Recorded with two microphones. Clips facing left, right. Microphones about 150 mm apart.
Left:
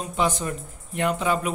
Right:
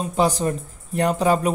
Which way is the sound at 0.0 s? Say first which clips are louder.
Right 5 dB; 35° right (ahead or behind).